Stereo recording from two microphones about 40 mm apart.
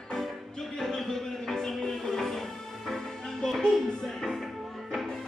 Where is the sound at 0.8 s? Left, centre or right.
Centre.